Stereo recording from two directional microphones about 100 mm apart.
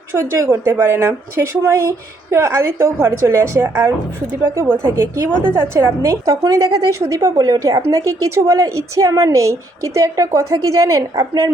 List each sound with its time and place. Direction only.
0.1 s a woman's voice: 30° right (ahead or behind)